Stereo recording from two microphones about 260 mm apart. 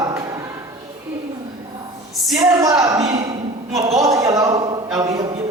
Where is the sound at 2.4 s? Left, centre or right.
Centre.